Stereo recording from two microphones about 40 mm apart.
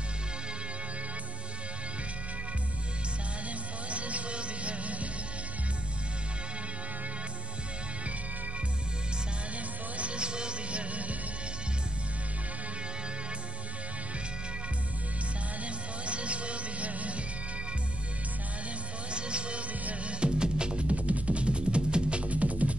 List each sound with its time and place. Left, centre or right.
3.9 s music: right
9.9 s music: right
15.6 s music: right
19.1 s music: right
19.8 s music: right
20.2 s music: right